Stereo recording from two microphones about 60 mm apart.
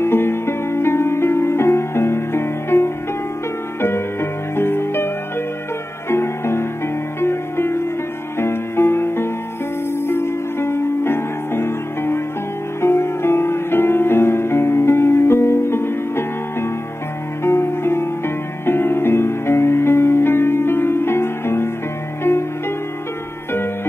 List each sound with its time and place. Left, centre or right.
0.0 s music: left